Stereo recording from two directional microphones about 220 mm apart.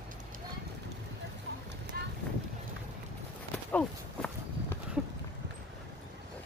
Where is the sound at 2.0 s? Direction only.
45° right (ahead or behind).